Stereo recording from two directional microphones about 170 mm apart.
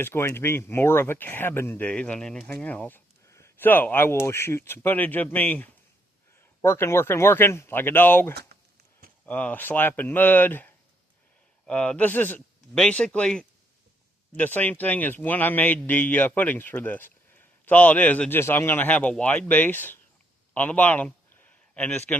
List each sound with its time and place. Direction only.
0.0 s speech: 15° left (ahead or behind)
8.4 s a sound: 70° right (ahead or behind)
9.2 s speech: 10° left (ahead or behind)